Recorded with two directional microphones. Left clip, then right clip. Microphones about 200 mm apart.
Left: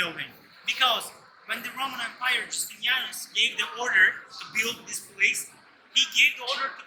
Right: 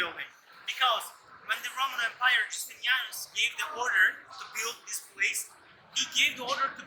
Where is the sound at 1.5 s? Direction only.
60° right (ahead or behind); by 6.3 s 25° right (ahead or behind).